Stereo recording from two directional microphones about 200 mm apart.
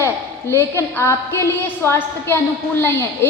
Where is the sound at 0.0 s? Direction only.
15° left (ahead or behind).